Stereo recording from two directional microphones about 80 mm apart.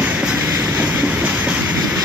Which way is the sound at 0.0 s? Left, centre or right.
Centre.